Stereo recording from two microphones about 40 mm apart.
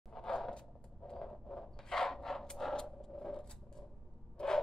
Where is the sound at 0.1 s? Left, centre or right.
Centre.